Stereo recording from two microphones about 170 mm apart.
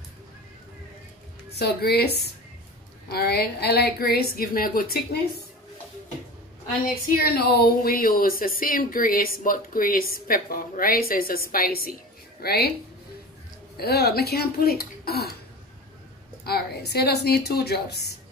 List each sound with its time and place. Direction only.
1.5 s speech: 70° left (ahead or behind)
7.2 s speech: 65° left (ahead or behind)
13.7 s speech: 70° left (ahead or behind)
16.4 s a woman's voice: 70° left (ahead or behind)